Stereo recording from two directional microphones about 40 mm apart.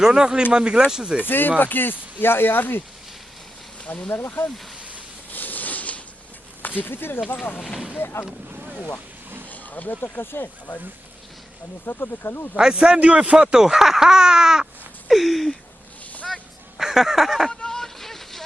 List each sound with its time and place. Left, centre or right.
0.0 s speech: centre
1.2 s speech: left
2.2 s speech: left
3.9 s speech: left
5.3 s a sound: left
6.6 s speech: left
7.9 s speech: left
9.5 s a sound: left
10.0 s speech: left
11.9 s speech: left
12.5 s speech: right
15.1 s a sound: centre
16.7 s a sound: centre
17.5 s vehicle: centre